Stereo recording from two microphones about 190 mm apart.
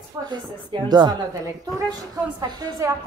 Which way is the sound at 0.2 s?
25° right (ahead or behind).